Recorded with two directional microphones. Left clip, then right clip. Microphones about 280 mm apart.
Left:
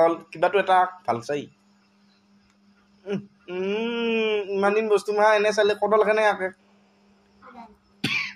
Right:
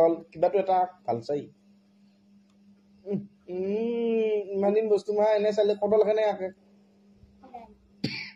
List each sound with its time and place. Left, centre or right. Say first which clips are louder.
0.0 s speech: left 2 dB; right
3.1 s speech: left 3 dB; right